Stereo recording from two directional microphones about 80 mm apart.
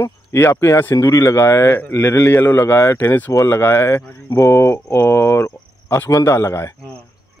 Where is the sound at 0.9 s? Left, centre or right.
Left.